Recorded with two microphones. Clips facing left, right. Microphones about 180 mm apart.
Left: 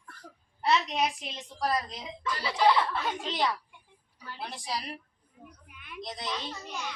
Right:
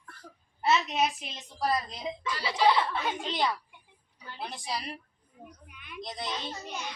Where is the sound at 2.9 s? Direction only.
Centre (ahead or behind).